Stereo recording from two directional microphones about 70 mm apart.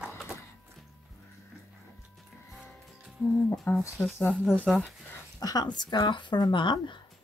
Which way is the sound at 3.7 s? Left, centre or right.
Left.